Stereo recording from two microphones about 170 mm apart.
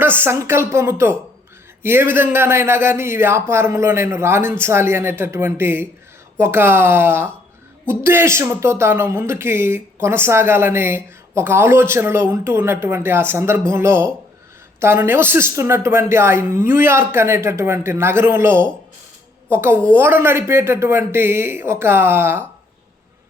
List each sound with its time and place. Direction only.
0.0 s speech: 10° right (ahead or behind)